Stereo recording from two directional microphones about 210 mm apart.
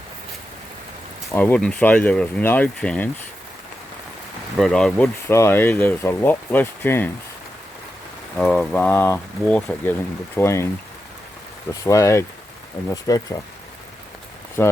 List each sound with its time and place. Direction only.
1.3 s speech: 10° left (ahead or behind)
4.5 s speech: centre (ahead or behind)
8.4 s speech: 5° left (ahead or behind)
11.7 s speech: 15° left (ahead or behind)
14.6 s speech: 10° left (ahead or behind)